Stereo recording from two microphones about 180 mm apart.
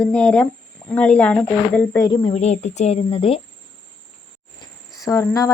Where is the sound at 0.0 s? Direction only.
5° left (ahead or behind).